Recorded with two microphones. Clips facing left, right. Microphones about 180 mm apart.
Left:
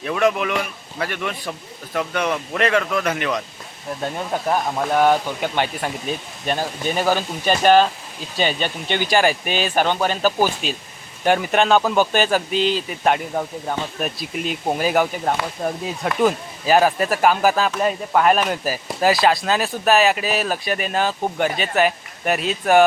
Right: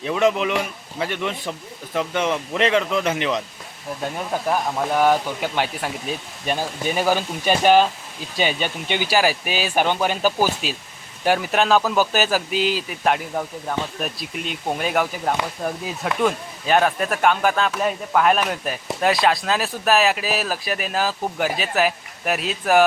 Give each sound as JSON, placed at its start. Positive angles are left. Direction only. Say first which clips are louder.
{"t": 0.0, "sound": "a man's voice", "louder": "even", "side_deg": -20}
{"t": 4.9, "sound": "speech", "louder": "left 2 dB", "side_deg": -5}